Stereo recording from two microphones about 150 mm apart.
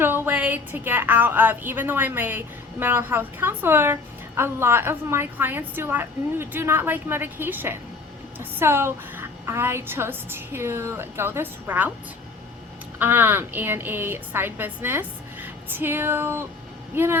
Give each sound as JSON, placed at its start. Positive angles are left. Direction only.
{"t": 0.0, "sound": "a woman's voice", "side_deg": -10}
{"t": 13.0, "sound": "a woman's voice", "side_deg": -15}